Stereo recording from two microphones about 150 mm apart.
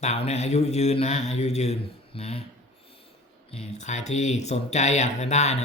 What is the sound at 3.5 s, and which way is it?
Speech, 45° left (ahead or behind).